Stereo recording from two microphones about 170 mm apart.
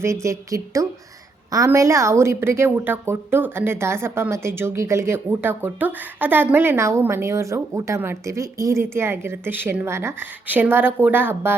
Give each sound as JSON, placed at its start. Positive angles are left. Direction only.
{"t": 0.0, "sound": "a woman's voice", "side_deg": -15}